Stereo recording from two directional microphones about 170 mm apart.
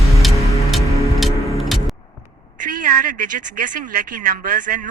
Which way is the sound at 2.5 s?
50° right (ahead or behind).